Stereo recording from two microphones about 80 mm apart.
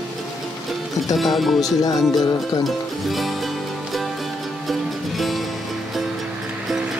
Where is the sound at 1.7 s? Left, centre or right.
Left.